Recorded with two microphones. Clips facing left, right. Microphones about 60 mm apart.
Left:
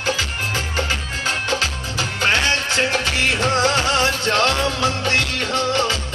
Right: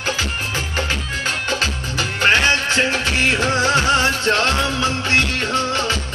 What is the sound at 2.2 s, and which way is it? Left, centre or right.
Music, right.